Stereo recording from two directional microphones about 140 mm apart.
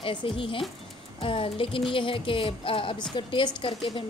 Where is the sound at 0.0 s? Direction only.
35° left (ahead or behind).